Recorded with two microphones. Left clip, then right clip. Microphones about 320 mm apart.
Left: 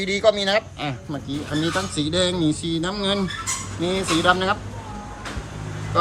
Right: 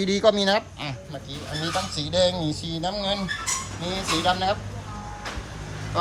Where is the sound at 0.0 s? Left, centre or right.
Centre.